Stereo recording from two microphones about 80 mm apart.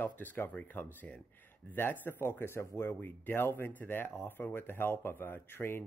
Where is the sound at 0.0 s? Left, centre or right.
Left.